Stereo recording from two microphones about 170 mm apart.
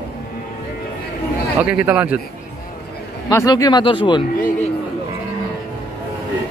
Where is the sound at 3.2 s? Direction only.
20° left (ahead or behind).